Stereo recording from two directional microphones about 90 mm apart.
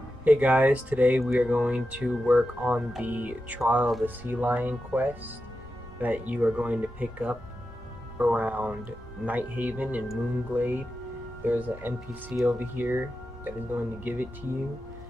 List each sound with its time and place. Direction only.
0.2 s speech: 15° right (ahead or behind)